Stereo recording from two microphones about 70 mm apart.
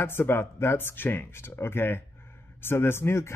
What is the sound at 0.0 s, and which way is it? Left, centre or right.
Speech, left.